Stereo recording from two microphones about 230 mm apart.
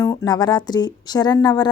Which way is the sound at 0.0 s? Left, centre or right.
Centre.